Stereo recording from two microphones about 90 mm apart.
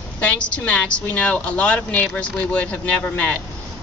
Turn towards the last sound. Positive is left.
turn(degrees=15)  # may be behind; listen again after turning